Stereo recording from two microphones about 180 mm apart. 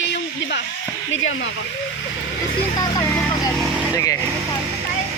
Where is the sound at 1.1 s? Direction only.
90° left.